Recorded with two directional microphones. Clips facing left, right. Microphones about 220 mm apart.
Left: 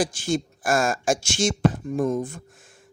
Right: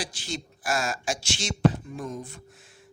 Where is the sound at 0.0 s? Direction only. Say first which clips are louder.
Left 11 dB; 50° left (ahead or behind).